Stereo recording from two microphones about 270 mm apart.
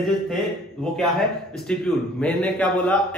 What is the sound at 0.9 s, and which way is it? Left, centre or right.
A man's voice, centre.